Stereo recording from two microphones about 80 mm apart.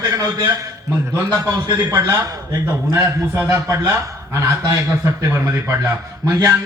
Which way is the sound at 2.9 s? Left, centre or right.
Right.